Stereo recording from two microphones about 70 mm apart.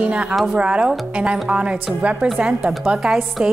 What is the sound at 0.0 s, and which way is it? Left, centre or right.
A woman's voice, centre.